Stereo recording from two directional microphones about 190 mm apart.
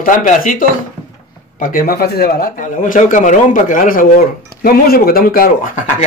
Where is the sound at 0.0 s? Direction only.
45° left (ahead or behind).